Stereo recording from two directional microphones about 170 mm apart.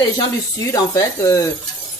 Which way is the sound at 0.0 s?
20° left (ahead or behind).